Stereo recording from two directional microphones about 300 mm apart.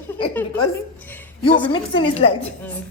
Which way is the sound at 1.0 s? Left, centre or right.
Centre.